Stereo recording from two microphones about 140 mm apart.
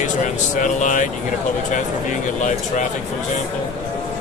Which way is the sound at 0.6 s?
65° left (ahead or behind).